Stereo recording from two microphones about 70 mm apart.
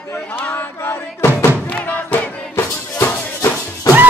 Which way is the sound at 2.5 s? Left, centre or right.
Left.